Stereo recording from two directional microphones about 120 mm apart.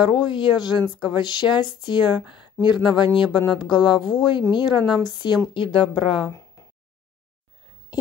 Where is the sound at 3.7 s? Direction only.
40° left (ahead or behind).